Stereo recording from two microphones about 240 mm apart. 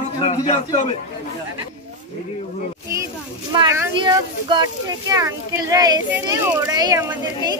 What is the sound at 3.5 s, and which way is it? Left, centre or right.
Speech, centre.